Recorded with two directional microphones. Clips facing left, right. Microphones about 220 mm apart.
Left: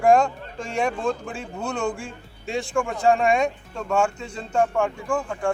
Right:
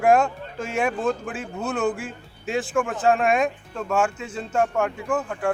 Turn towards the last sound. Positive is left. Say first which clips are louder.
# even
turn(degrees=-5)  # may be behind; listen again after turning